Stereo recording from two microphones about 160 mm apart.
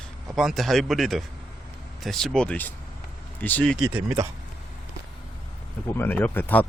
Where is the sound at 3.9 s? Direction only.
20° right (ahead or behind).